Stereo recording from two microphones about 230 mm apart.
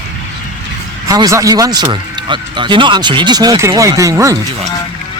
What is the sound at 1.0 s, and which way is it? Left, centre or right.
Speech, centre.